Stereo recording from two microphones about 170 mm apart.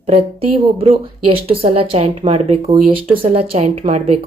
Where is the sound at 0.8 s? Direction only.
35° right (ahead or behind).